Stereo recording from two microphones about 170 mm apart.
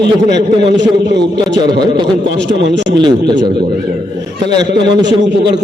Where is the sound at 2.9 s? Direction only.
25° right (ahead or behind).